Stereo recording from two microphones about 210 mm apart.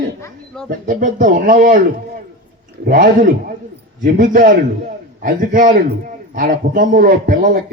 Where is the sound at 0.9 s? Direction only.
40° right (ahead or behind).